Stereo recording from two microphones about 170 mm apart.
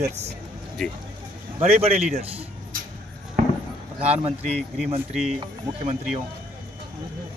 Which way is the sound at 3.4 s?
50° right (ahead or behind).